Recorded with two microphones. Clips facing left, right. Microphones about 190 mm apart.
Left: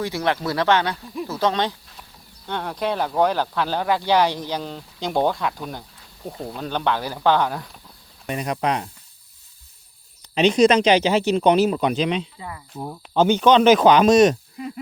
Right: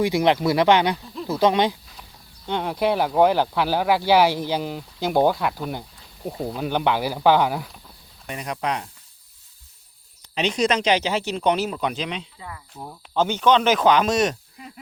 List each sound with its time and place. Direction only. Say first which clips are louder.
0.0 s speech: right 4 dB; 15° right (ahead or behind)
8.3 s speech: left 4 dB; 30° left (ahead or behind)
10.3 s speech: left 6 dB; 25° left (ahead or behind)